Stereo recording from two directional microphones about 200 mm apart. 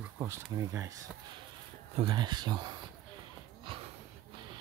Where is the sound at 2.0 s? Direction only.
25° right (ahead or behind).